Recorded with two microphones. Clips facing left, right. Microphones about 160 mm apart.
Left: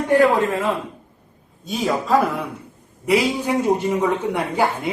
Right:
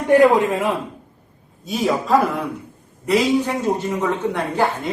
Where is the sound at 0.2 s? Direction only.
20° right (ahead or behind).